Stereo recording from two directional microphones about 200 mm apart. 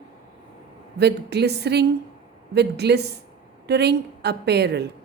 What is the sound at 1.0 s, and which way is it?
A woman's voice, 55° right (ahead or behind).